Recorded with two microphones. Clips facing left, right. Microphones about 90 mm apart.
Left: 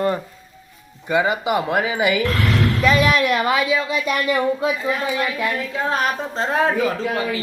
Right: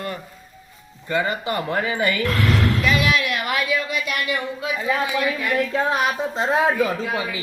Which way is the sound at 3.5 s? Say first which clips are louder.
Left 4 dB; 20° left (ahead or behind).